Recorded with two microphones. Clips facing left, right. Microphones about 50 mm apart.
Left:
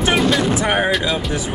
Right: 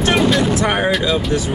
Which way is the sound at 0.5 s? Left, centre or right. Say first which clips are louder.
Right 1 dB; centre.